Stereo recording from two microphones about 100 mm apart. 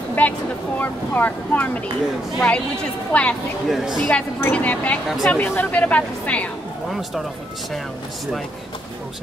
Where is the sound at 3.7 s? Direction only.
5° right (ahead or behind).